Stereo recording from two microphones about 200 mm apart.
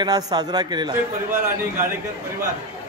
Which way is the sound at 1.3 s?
10° right (ahead or behind).